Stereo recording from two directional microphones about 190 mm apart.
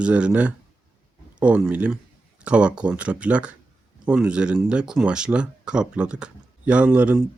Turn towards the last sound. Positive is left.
turn(degrees=-5)  # may be behind; listen again after turning